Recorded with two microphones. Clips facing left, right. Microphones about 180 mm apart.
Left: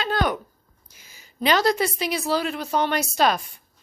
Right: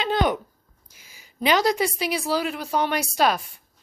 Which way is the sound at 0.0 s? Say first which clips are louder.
Right 2 dB; 20° right (ahead or behind).